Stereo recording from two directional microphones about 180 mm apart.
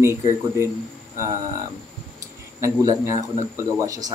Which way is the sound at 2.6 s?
20° right (ahead or behind).